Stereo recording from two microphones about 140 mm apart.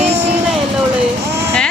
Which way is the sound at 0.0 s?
50° right (ahead or behind).